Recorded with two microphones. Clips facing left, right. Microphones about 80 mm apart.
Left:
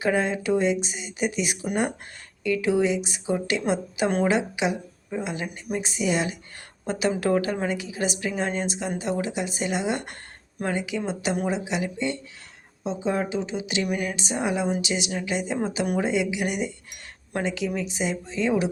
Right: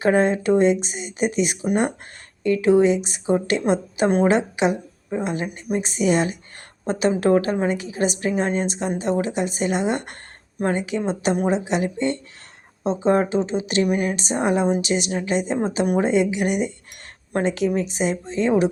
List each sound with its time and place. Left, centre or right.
0.0 s speech: right
4.3 s a woman's voice: right
7.2 s speech: right
7.7 s speech: right
13.8 s a woman's voice: right
18.3 s speech: right